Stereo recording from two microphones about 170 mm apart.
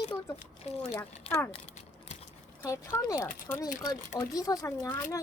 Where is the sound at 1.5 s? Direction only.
40° left (ahead or behind).